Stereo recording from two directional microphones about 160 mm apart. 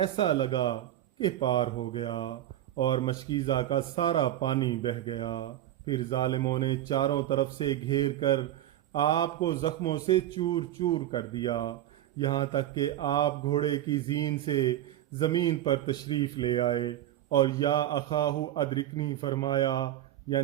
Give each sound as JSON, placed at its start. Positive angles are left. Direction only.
{"t": 0.0, "sound": "speech", "side_deg": 30}